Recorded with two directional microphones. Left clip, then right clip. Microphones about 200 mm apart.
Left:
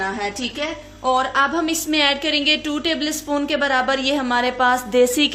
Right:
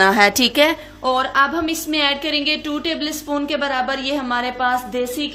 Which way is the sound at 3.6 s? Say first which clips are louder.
Left 2 dB; 10° left (ahead or behind).